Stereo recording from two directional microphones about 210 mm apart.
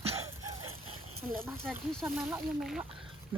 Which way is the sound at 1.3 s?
10° right (ahead or behind).